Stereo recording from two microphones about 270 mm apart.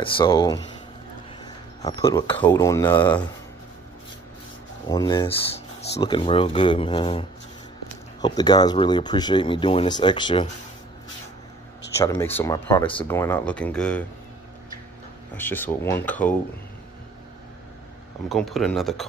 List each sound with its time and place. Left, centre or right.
0.2 s speech: centre
1.4 s a sound: centre
2.4 s speech: centre
4.8 s speech: centre
12.0 s speech: centre
15.3 s speech: centre
18.3 s speech: centre